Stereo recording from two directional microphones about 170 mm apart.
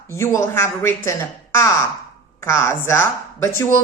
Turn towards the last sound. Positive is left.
turn(degrees=15)  # may be behind; listen again after turning